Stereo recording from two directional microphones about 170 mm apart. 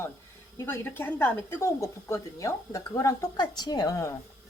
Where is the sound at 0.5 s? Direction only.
15° left (ahead or behind).